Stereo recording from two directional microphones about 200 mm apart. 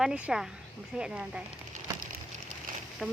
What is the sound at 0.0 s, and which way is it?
Speech, 5° right (ahead or behind).